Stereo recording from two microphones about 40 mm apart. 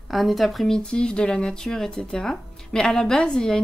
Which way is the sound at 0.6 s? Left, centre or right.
Left.